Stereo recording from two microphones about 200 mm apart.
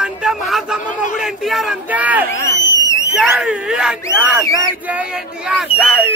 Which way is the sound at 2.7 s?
15° left (ahead or behind).